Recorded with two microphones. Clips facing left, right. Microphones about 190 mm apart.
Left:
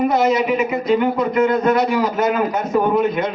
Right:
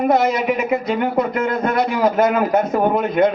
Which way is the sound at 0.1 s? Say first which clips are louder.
Even; 55° right (ahead or behind).